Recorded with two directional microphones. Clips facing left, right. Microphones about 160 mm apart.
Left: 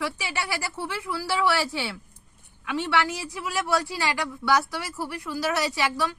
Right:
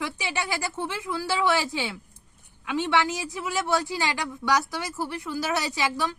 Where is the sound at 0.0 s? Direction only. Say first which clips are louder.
Even; 20° right (ahead or behind).